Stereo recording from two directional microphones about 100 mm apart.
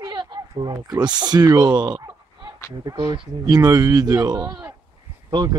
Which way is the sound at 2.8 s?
40° right (ahead or behind).